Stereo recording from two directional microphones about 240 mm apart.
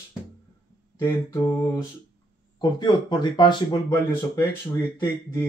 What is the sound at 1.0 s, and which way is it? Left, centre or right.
Mantra, centre.